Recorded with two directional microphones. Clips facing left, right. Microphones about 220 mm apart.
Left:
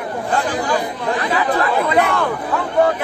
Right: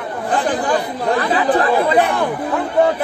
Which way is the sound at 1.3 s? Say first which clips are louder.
Right 2 dB; 30° right (ahead or behind).